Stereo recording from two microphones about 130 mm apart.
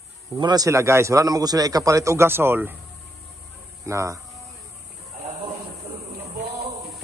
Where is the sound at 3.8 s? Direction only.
25° right (ahead or behind).